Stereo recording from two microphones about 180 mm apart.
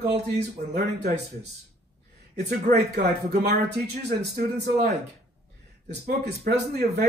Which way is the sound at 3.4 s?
65° right (ahead or behind).